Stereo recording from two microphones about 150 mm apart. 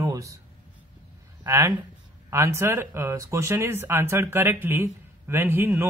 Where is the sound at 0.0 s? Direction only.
20° right (ahead or behind).